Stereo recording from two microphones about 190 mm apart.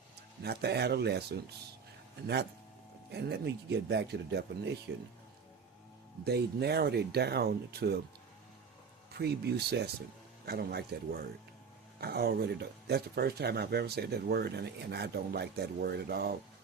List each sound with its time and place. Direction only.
0.4 s speech: 60° right (ahead or behind)
6.2 s speech: 60° right (ahead or behind)
9.1 s speech: 60° right (ahead or behind)